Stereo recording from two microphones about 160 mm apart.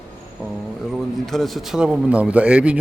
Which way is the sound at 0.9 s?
Centre (ahead or behind).